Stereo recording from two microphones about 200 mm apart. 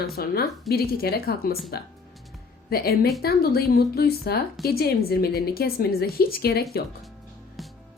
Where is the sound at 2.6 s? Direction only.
50° left (ahead or behind).